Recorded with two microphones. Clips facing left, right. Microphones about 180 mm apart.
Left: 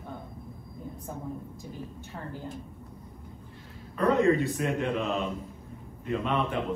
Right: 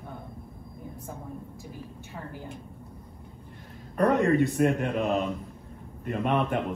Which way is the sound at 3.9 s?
60° right (ahead or behind).